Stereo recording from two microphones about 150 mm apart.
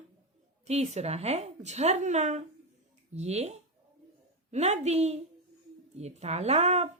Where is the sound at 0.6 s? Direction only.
45° right (ahead or behind).